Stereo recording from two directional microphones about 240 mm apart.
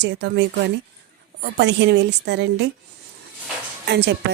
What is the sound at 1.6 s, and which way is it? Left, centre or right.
A woman's voice, right.